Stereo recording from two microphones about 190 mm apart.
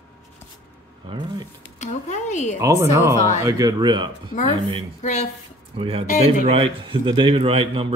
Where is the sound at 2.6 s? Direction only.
15° right (ahead or behind).